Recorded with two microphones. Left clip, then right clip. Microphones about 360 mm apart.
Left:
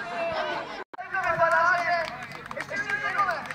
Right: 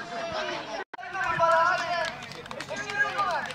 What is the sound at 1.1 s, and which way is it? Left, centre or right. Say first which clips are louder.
Run: even; centre.